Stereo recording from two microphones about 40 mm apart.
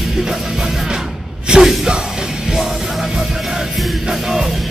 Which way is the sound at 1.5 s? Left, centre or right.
Right.